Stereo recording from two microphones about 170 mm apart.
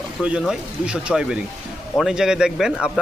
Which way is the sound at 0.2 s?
5° right (ahead or behind).